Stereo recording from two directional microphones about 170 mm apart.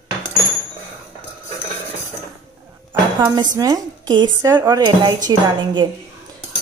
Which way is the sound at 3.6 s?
20° right (ahead or behind).